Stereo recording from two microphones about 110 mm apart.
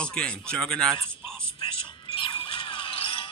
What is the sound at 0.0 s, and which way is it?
Speech, 10° left (ahead or behind).